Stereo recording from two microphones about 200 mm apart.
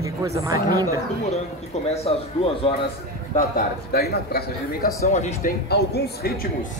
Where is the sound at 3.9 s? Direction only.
50° left (ahead or behind).